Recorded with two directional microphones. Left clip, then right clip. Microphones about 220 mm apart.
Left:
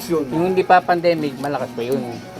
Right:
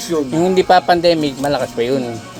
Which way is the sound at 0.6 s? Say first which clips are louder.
Right 3 dB; 70° right (ahead or behind).